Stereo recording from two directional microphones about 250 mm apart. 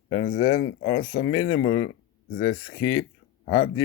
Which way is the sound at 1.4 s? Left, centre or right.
Left.